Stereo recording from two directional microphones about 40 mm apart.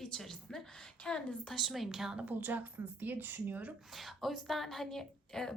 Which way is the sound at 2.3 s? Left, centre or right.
Right.